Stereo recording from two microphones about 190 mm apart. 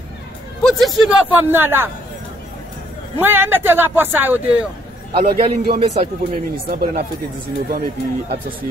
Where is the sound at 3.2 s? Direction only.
10° right (ahead or behind).